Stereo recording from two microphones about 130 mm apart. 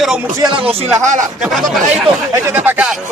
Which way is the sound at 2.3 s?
15° right (ahead or behind).